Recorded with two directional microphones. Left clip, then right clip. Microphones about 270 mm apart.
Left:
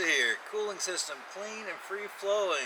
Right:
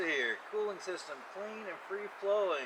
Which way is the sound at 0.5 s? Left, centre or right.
Right.